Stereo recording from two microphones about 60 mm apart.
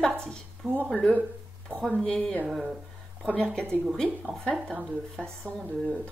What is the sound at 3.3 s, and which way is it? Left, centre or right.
Speech, centre.